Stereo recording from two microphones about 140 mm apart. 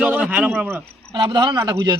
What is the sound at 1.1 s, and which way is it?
Speech, 35° right (ahead or behind).